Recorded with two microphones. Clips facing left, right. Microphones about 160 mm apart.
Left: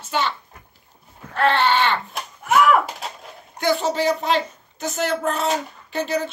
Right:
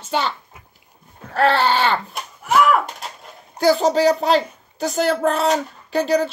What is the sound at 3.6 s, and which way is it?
Speech, 35° right (ahead or behind).